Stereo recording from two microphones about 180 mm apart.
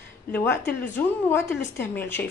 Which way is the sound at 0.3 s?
10° left (ahead or behind).